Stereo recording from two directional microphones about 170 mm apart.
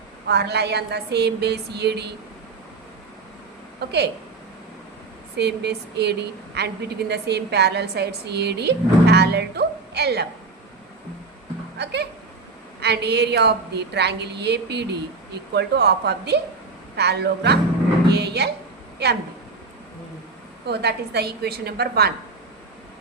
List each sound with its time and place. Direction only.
0.3 s a woman's voice: 75° right (ahead or behind)
3.8 s a woman's voice: 75° right (ahead or behind)
5.4 s a woman's voice: 80° right
11.8 s a woman's voice: 80° right
18.1 s music: 75° right (ahead or behind)
20.7 s a woman's voice: 75° right (ahead or behind)